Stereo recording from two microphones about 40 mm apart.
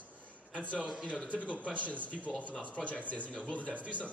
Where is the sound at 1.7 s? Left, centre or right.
Left.